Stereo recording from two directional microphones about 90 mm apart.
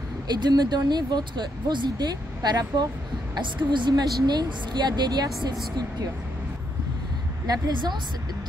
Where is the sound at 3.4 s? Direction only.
60° right (ahead or behind).